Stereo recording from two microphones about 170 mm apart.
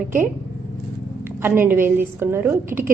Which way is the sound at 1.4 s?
10° right (ahead or behind).